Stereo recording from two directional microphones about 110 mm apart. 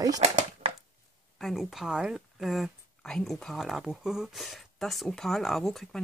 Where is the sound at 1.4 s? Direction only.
Centre (ahead or behind).